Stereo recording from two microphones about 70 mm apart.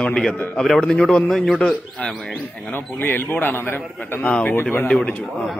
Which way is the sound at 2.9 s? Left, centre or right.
Left.